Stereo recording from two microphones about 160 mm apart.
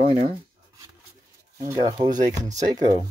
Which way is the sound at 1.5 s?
20° right (ahead or behind).